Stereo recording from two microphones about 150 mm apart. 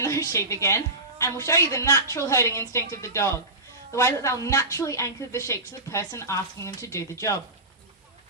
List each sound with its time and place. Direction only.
0.0 s a woman's voice: 20° left (ahead or behind)